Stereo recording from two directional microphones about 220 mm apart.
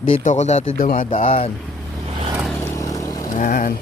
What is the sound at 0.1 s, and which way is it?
A man's voice, 35° left (ahead or behind).